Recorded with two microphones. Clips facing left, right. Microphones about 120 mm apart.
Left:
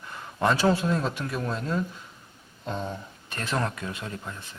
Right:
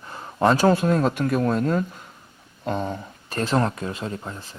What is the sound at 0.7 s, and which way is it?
Speech, 50° right (ahead or behind).